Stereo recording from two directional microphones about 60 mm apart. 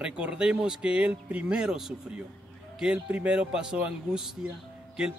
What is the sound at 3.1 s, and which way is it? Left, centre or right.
Speech, right.